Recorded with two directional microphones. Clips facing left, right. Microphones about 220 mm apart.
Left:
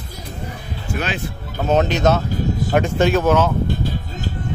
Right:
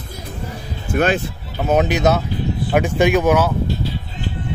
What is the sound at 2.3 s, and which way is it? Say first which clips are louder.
Music: left 1 dB; 45° left (ahead or behind).